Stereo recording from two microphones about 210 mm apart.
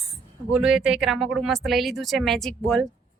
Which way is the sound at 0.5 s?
Centre (ahead or behind).